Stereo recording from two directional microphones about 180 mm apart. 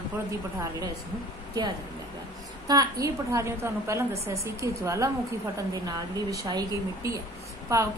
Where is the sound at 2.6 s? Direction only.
20° right (ahead or behind).